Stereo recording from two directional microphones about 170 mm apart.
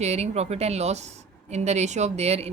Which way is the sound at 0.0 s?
40° right (ahead or behind).